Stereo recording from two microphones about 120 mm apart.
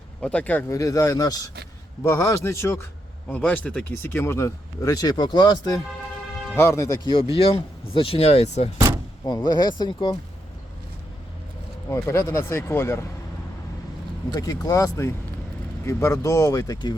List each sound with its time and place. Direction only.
0.2 s speech: 10° left (ahead or behind)
0.7 s speech: 25° left (ahead or behind)
6.6 s speech: 25° left (ahead or behind)
7.1 s speech: 50° left (ahead or behind)
9.2 s speech: 35° left (ahead or behind)
11.9 s speech: 25° left (ahead or behind)
14.3 s speech: 30° left (ahead or behind)